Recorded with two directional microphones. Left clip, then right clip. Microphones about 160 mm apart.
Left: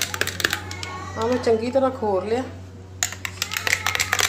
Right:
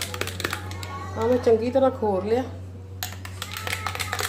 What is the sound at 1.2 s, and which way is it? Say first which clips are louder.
Speech: right 1 dB; 10° right (ahead or behind).